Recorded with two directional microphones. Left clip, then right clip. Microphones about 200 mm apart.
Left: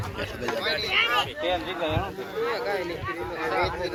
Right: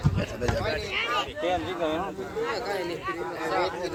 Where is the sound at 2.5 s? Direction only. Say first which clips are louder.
Left 2 dB; 70° right (ahead or behind).